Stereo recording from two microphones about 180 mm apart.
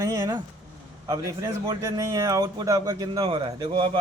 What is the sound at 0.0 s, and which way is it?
A man's voice, 20° right (ahead or behind).